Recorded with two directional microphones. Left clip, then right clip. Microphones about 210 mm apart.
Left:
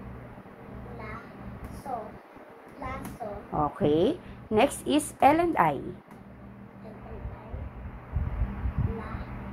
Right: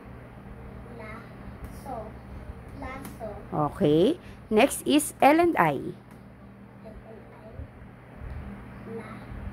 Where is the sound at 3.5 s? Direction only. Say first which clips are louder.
Right 2 dB; 50° right (ahead or behind).